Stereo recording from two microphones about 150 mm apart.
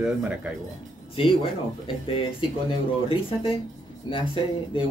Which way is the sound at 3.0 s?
35° left (ahead or behind).